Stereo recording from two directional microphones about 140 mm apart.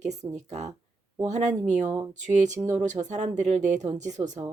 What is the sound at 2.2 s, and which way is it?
Speech, 60° right (ahead or behind).